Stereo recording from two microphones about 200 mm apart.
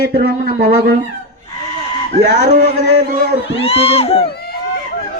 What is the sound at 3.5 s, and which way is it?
Speech, 30° left (ahead or behind).